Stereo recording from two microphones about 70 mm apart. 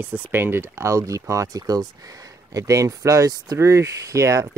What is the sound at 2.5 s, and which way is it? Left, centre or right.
Speech, right.